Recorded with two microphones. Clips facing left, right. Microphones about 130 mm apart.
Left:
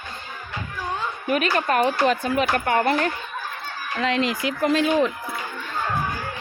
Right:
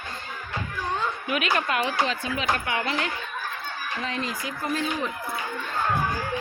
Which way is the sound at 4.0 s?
90° left.